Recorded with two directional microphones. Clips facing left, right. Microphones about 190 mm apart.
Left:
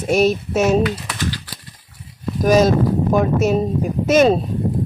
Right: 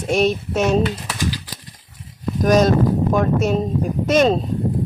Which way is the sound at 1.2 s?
15° right (ahead or behind).